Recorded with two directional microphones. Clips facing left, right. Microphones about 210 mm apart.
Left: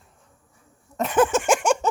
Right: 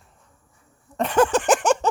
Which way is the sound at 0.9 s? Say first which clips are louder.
Right 1 dB; centre (ahead or behind).